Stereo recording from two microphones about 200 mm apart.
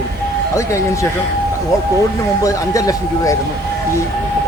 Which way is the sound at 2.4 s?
15° left (ahead or behind).